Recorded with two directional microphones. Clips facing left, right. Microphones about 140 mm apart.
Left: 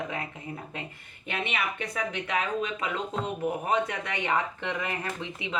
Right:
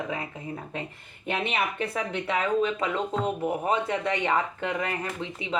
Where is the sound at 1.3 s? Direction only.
30° right (ahead or behind).